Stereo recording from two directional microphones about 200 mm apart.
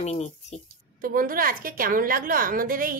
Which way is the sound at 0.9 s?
45° right (ahead or behind).